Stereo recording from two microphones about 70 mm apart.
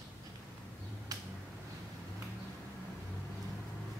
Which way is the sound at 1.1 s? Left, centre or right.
Right.